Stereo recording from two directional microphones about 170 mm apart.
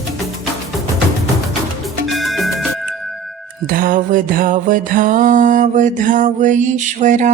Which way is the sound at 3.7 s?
55° right (ahead or behind).